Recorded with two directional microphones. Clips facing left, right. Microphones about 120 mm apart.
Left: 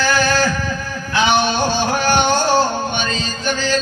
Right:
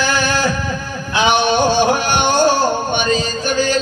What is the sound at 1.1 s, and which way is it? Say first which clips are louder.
Music: right 2 dB; 15° right (ahead or behind).